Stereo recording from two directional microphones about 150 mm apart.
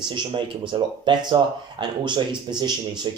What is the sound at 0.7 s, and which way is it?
Speech, 30° right (ahead or behind).